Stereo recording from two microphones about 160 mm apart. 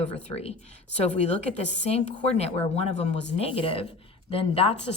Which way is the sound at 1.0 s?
45° left (ahead or behind).